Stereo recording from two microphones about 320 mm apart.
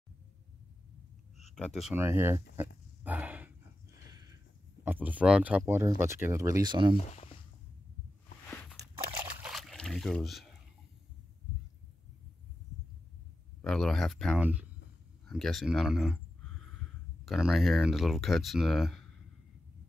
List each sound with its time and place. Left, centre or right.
1.5 s speech: centre
3.0 s a sound: centre
4.8 s speech: centre
7.0 s speech: centre
9.2 s a sound: centre
13.6 s speech: centre
17.2 s speech: centre